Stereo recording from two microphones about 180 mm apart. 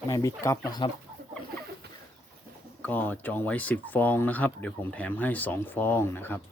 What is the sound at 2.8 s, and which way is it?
Speech, 10° left (ahead or behind).